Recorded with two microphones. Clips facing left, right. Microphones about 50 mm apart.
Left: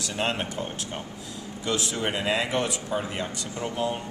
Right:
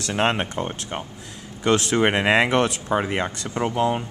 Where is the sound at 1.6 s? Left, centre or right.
Right.